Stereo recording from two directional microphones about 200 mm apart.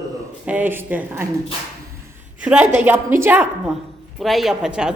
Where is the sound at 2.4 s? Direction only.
5° right (ahead or behind).